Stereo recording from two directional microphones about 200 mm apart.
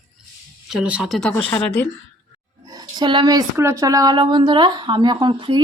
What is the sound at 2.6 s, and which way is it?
Speech, 20° right (ahead or behind).